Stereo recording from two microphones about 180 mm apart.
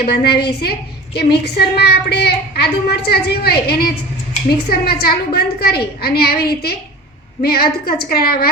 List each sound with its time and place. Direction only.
0.1 s a woman's voice: 65° left (ahead or behind)